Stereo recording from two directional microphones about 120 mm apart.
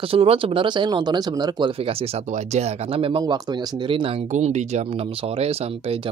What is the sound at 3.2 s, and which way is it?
Speech, 35° right (ahead or behind).